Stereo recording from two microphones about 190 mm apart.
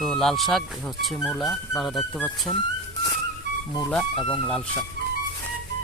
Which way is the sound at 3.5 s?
65° right (ahead or behind).